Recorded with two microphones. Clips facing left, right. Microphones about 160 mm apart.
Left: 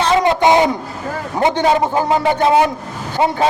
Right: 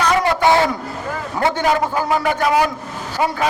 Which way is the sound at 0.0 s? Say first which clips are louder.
Left 3 dB; 25° left (ahead or behind).